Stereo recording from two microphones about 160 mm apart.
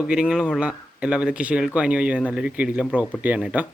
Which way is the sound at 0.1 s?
5° right (ahead or behind).